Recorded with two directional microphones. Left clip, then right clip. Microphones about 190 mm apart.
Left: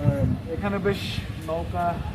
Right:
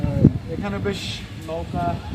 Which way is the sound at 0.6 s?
5° right (ahead or behind).